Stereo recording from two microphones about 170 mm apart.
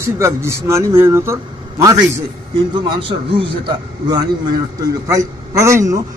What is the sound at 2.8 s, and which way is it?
A man's voice, 30° right (ahead or behind).